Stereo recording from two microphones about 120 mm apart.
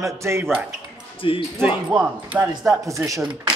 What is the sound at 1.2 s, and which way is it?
Speech, 50° left (ahead or behind).